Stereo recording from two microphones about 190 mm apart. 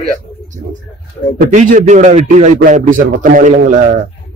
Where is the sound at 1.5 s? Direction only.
40° right (ahead or behind).